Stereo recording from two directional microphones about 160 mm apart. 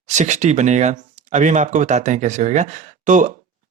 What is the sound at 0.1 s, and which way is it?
Speech, 45° right (ahead or behind).